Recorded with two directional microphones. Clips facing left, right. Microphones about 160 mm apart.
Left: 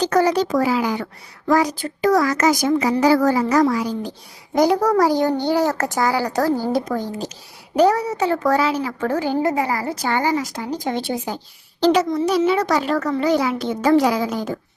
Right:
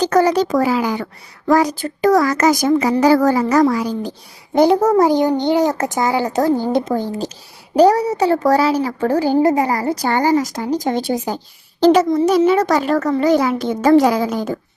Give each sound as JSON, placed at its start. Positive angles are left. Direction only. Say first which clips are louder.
{"t": 0.0, "sound": "a child's voice", "louder": "right 3 dB", "side_deg": -45}
{"t": 4.5, "sound": "a child's voice", "louder": "right 4 dB", "side_deg": -25}